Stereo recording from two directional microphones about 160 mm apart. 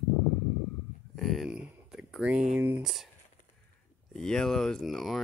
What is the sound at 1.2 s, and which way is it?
Speech, centre (ahead or behind).